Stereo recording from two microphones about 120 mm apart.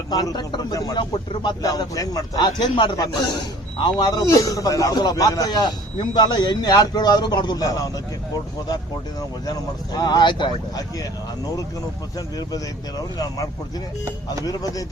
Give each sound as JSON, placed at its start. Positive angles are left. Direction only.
{"t": 0.1, "sound": "a man's voice", "side_deg": 35}
{"t": 1.3, "sound": "a man's voice", "side_deg": 40}
{"t": 1.6, "sound": "a man's voice", "side_deg": 30}
{"t": 9.5, "sound": "a man's voice", "side_deg": 35}
{"t": 12.4, "sound": "a man's voice", "side_deg": 30}